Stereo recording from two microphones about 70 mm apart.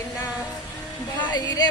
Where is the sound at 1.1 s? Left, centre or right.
Left.